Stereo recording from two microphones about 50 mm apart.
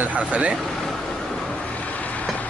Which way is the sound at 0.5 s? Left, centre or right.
Centre.